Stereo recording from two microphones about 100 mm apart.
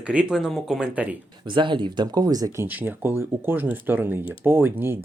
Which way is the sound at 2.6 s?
20° right (ahead or behind).